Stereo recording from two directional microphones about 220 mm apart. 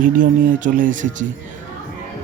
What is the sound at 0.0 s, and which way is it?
Speech, 35° right (ahead or behind).